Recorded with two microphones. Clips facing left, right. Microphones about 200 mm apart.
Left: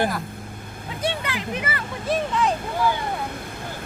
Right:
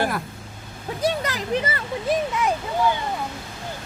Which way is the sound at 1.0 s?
40° right (ahead or behind).